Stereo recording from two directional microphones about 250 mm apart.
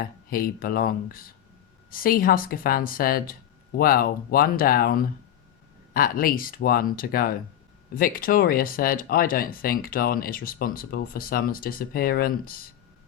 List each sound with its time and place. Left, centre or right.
0.0 s speech: left